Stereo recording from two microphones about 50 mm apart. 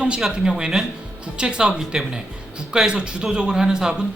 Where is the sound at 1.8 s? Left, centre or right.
Centre.